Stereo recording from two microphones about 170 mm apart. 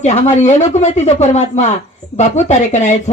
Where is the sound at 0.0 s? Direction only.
40° left (ahead or behind).